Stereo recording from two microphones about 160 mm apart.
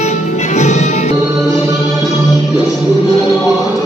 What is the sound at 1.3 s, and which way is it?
Music, 20° right (ahead or behind).